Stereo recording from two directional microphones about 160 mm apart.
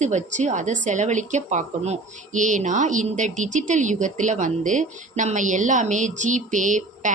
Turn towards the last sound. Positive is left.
turn(degrees=-50)  # may be behind; listen again after turning